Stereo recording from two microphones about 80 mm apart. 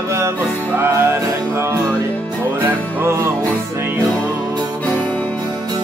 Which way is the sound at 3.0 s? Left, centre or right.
Right.